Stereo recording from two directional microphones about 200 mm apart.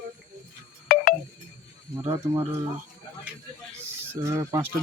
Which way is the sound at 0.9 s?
45° left (ahead or behind).